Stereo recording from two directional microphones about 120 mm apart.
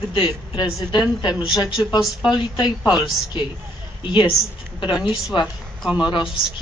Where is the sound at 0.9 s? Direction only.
40° left (ahead or behind).